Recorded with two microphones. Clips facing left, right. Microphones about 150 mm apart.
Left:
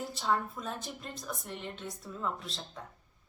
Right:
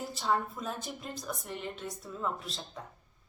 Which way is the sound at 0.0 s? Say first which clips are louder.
Right 1 dB; centre (ahead or behind).